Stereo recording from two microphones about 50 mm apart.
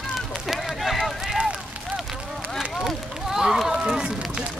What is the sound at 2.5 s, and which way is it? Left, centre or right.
Run, centre.